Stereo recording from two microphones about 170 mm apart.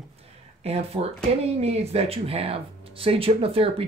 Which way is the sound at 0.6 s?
35° right (ahead or behind).